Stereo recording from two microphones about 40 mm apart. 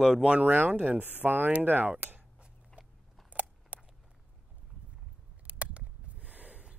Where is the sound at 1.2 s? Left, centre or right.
Right.